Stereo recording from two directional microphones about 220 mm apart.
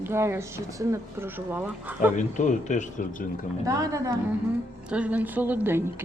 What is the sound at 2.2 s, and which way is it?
Speech, 35° left (ahead or behind).